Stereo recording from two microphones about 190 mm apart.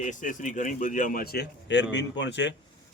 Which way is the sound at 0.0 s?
40° left (ahead or behind).